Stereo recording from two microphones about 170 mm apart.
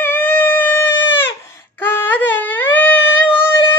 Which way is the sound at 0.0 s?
10° left (ahead or behind).